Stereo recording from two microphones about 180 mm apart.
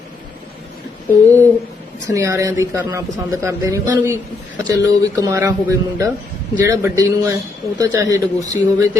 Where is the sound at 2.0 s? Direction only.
15° right (ahead or behind).